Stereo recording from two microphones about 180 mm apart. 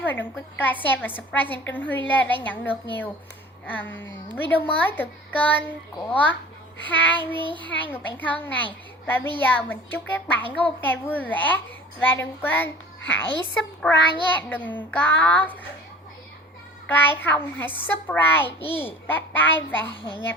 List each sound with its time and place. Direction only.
0.0 s a child's voice: 10° left (ahead or behind)
4.3 s a child's voice: 10° left (ahead or behind)
7.3 s a child's voice: 25° right (ahead or behind)
7.7 s a child's voice: 10° left (ahead or behind)
13.8 s child singing: 5° left (ahead or behind)
14.3 s a child's voice: 10° left (ahead or behind)
16.8 s a child's voice: 10° left (ahead or behind)